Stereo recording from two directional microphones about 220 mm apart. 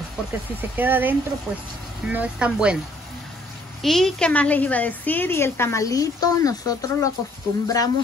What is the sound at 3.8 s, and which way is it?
A woman's voice, centre (ahead or behind).